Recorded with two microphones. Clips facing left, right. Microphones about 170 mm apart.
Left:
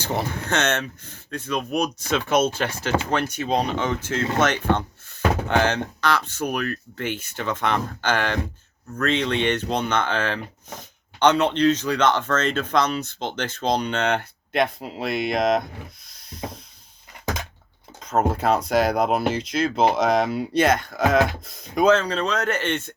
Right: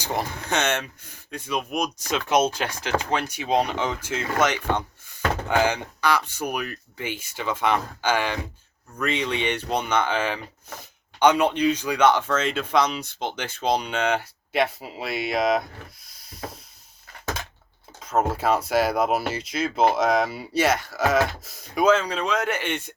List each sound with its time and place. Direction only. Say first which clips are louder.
0.0 s speech: left 2 dB; 15° right (ahead or behind)
18.3 s speech: left 2 dB; 5° right (ahead or behind)